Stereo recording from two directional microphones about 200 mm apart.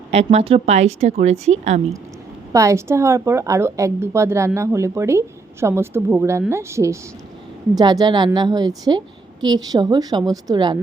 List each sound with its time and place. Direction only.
0.1 s speech: 30° right (ahead or behind)
2.5 s a woman's voice: 15° right (ahead or behind)